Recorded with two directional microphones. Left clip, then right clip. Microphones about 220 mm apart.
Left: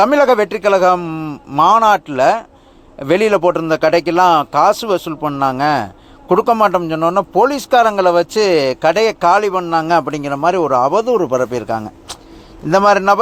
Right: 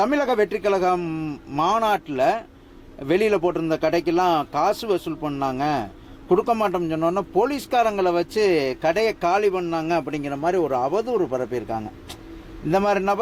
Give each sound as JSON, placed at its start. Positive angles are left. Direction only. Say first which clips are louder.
{"t": 0.0, "sound": "a man's voice", "louder": "left 9 dB", "side_deg": 15}